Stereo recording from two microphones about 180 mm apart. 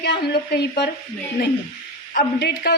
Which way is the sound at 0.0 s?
65° left (ahead or behind).